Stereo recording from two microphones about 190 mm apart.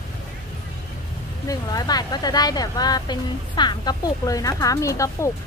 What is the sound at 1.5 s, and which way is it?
Speech, 20° left (ahead or behind).